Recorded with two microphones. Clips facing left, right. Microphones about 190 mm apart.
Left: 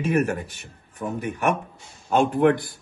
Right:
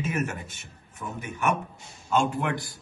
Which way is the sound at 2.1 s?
55° left (ahead or behind).